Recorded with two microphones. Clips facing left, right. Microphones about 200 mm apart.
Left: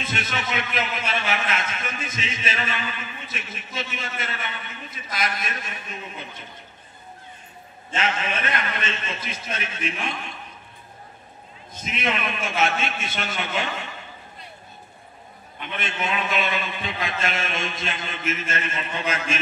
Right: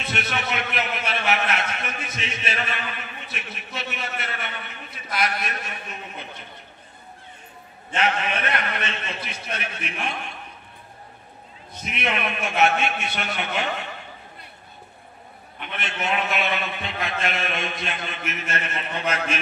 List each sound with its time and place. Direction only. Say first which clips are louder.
0.0 s a sound: right 1 dB; 60° right (ahead or behind)
7.9 s a man's voice: right 2 dB; 60° right (ahead or behind)
11.7 s a man's voice: even; 60° right (ahead or behind)
15.8 s a man's voice: right 1 dB; 60° right (ahead or behind)